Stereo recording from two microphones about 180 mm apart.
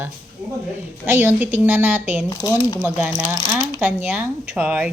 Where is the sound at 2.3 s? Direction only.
20° left (ahead or behind).